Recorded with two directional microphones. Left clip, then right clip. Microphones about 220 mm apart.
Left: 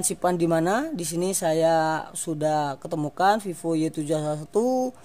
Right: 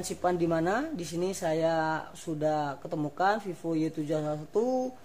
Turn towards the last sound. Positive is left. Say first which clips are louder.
# left 5 dB
turn(degrees=50)  # may be behind; listen again after turning